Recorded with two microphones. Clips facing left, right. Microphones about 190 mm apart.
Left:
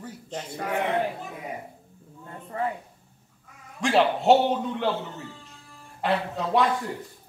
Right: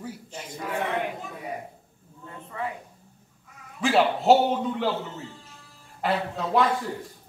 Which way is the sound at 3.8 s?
Centre (ahead or behind).